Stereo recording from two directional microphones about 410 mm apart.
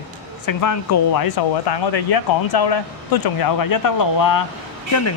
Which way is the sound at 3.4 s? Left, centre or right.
Left.